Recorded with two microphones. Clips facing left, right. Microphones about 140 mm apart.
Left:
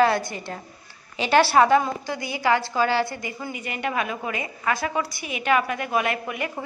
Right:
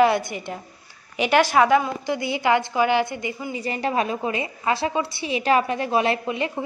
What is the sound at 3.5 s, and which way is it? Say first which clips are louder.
A woman's voice: right 4 dB; 35° right (ahead or behind).